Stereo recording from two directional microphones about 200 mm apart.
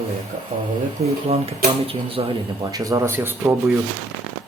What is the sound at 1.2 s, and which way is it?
Speech, 30° right (ahead or behind).